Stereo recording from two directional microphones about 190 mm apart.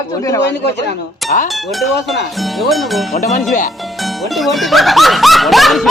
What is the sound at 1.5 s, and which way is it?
Speech, centre (ahead or behind).